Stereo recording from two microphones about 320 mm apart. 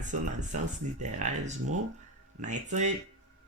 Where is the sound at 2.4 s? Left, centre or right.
Right.